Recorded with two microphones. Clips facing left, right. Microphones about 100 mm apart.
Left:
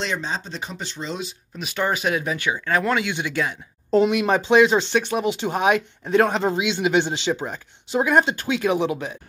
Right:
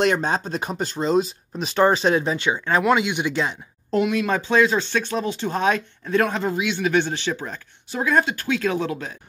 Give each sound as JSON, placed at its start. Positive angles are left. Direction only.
{"t": 0.0, "sound": "speech", "side_deg": -55}
{"t": 3.9, "sound": "speech", "side_deg": 20}